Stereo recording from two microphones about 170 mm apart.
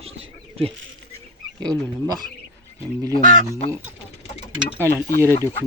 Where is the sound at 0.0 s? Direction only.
35° right (ahead or behind).